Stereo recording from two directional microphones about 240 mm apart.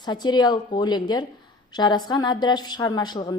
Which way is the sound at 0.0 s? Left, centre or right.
Centre.